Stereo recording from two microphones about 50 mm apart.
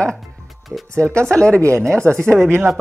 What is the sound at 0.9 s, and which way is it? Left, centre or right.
Speech, right.